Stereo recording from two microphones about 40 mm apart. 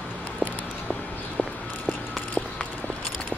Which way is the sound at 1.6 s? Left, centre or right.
Left.